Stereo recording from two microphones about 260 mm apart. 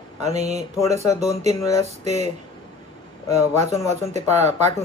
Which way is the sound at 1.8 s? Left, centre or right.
Right.